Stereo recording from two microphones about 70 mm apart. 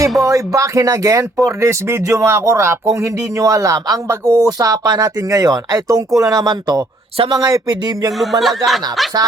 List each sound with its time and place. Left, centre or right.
0.3 s speech: right
7.3 s a sound: right
8.2 s speech: centre